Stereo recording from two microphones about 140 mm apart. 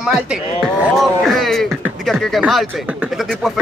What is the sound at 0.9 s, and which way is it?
Music, centre (ahead or behind).